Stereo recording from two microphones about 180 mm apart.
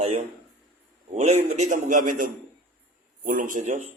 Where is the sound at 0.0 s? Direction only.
35° right (ahead or behind).